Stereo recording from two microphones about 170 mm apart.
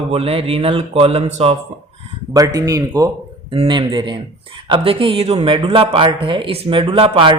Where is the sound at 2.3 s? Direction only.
20° right (ahead or behind).